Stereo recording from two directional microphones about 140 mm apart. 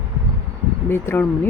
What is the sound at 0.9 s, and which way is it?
Speech, 15° left (ahead or behind).